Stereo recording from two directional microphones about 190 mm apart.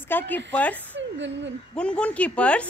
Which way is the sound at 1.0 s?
70° right (ahead or behind).